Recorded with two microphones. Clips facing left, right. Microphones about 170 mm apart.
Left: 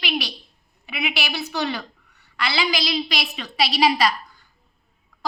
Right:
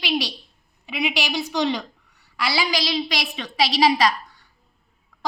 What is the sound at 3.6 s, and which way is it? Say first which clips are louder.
Speech: right 1 dB; 10° left (ahead or behind).